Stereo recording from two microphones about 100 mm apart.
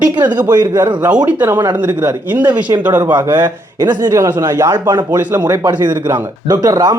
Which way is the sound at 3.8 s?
40° right (ahead or behind).